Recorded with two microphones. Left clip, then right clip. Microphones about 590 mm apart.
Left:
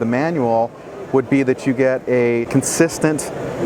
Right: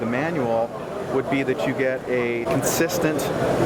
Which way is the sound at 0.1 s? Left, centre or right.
Left.